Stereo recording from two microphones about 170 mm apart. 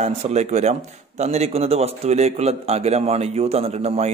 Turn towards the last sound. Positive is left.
turn(degrees=-40)  # may be behind; listen again after turning